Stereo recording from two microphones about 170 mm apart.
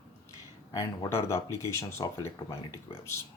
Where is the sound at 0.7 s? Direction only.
20° left (ahead or behind).